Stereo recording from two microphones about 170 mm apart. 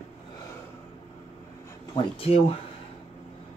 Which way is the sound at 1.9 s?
35° left (ahead or behind).